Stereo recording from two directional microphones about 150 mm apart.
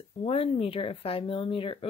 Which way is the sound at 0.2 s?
40° left (ahead or behind).